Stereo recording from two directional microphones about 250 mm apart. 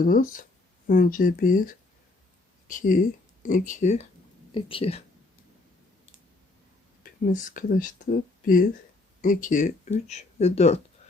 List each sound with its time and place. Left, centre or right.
0.0 s speech: left
7.0 s speech: left